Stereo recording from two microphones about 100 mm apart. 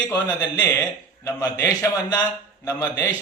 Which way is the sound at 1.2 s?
30° left (ahead or behind).